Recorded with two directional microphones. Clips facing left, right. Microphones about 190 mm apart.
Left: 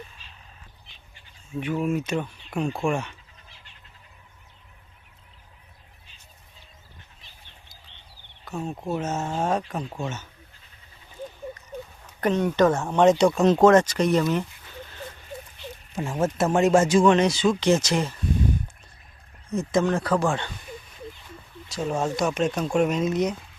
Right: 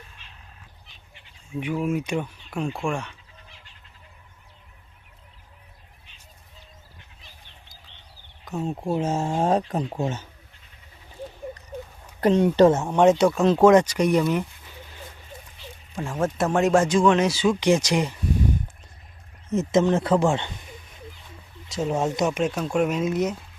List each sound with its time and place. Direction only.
1.5 s speech: 10° right (ahead or behind)
2.7 s speech: 5° left (ahead or behind)
8.9 s speech: 30° right (ahead or behind)
12.2 s speech: 30° right (ahead or behind)
12.8 s speech: 10° right (ahead or behind)
13.7 s speech: 10° right (ahead or behind)
16.0 s speech: 5° left (ahead or behind); by 18.2 s 15° right (ahead or behind)
19.5 s speech: 20° right (ahead or behind)
21.7 s speech: 20° right (ahead or behind); by 23.3 s 5° right (ahead or behind)